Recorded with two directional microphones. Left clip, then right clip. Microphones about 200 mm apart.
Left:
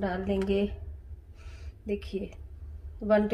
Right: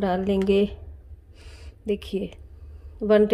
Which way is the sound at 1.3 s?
40° right (ahead or behind).